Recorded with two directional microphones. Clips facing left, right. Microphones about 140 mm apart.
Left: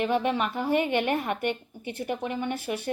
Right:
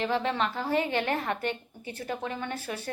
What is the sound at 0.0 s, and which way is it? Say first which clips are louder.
A woman's voice: left 2 dB; 15° left (ahead or behind).